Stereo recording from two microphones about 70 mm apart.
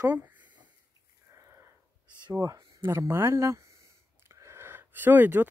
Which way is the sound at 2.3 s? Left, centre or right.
Right.